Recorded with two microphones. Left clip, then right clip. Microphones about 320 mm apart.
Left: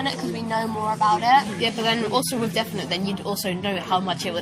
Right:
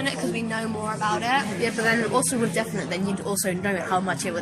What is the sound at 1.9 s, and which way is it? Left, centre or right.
A woman's voice, centre.